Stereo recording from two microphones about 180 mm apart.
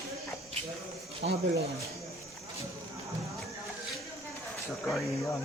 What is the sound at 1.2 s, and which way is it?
Speech, 90° right.